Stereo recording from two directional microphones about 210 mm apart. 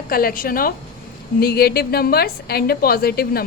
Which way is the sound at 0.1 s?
45° left (ahead or behind).